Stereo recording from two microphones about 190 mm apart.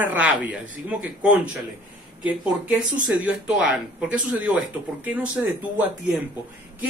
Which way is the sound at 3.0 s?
5° right (ahead or behind).